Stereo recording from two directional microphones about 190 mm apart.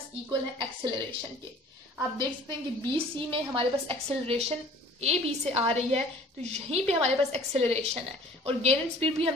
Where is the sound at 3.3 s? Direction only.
25° right (ahead or behind).